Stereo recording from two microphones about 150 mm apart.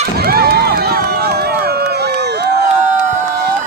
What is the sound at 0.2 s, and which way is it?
Run, 90° right.